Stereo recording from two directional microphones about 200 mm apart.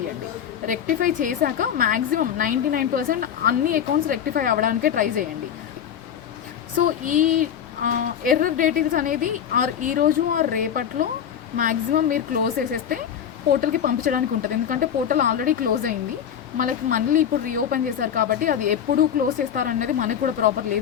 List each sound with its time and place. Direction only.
0.7 s a woman's voice: 40° right (ahead or behind)
6.7 s a woman's voice: 40° right (ahead or behind)